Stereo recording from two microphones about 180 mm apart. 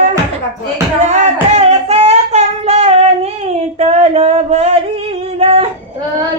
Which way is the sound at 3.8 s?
35° right (ahead or behind).